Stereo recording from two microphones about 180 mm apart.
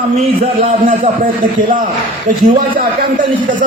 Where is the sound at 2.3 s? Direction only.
50° right (ahead or behind).